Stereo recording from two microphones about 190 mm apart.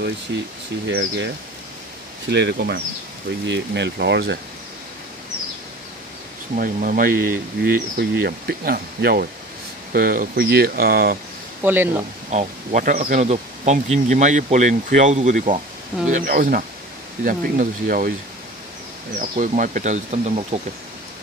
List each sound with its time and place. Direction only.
0.8 s speech: 65° right (ahead or behind)
2.3 s speech: 60° right (ahead or behind)
6.5 s speech: 45° right (ahead or behind)
11.6 s speech: 10° right (ahead or behind)
12.3 s speech: 40° right (ahead or behind)
19.1 s speech: 45° right (ahead or behind)